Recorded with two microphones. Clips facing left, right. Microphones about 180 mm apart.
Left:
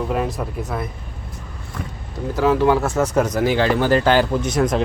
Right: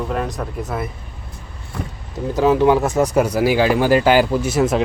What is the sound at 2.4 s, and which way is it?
Speech, 20° right (ahead or behind).